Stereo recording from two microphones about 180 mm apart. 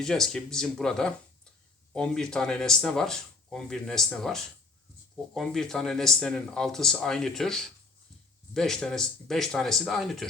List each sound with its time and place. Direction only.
0.0 s speech: 5° left (ahead or behind)